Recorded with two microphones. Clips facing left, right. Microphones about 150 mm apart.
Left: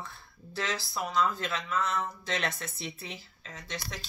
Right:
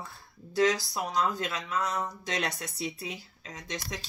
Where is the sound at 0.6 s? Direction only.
40° right (ahead or behind).